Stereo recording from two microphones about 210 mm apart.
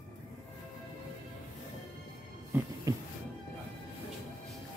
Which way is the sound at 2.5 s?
10° right (ahead or behind).